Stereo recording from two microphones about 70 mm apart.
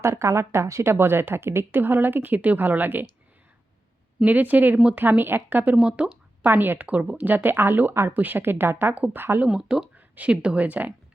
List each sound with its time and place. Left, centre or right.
0.0 s a woman's voice: right
4.3 s speech: right
5.7 s speech: centre
6.4 s speech: right
9.5 s speech: centre